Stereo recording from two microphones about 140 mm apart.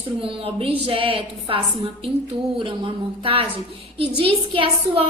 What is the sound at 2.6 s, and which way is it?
A woman's voice, 40° right (ahead or behind).